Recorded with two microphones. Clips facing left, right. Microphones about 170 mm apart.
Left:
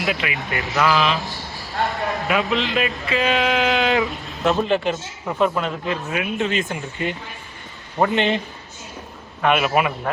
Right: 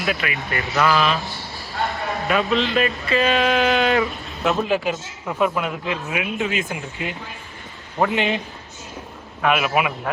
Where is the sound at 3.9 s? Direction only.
20° left (ahead or behind).